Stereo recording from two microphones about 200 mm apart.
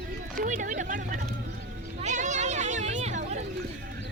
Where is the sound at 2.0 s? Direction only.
35° right (ahead or behind).